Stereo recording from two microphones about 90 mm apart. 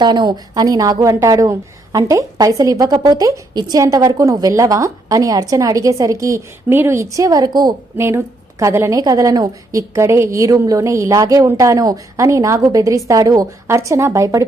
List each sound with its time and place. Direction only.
0.0 s a woman's voice: 55° right (ahead or behind); by 6.4 s 35° right (ahead or behind)
6.7 s a woman's voice: 25° right (ahead or behind); by 7.7 s 50° right (ahead or behind)
7.9 s a woman's voice: 30° right (ahead or behind)
13.7 s a woman's voice: 30° right (ahead or behind)